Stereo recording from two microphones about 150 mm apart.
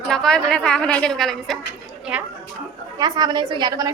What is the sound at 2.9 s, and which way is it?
Speech, 25° right (ahead or behind).